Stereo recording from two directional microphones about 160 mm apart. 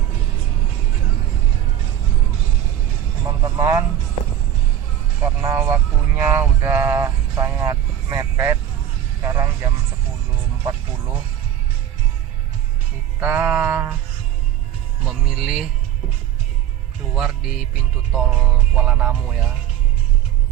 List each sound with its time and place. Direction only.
3.2 s vehicle: 20° right (ahead or behind)
5.2 s vehicle: 15° right (ahead or behind)
9.2 s a sound: 20° right (ahead or behind)
13.1 s music: 10° right (ahead or behind)
15.0 s music: 5° right (ahead or behind)
17.2 s music: 5° right (ahead or behind)